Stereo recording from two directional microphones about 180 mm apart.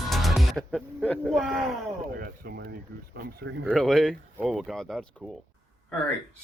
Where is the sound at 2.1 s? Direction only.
55° right (ahead or behind).